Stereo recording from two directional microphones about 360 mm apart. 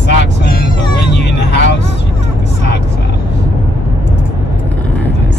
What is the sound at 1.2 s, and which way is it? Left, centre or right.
Vehicle, left.